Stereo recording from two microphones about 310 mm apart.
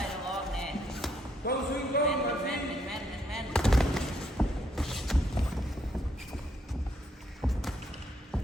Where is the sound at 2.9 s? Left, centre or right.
Centre.